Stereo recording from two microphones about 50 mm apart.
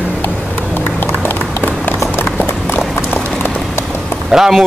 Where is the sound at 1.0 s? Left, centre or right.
Left.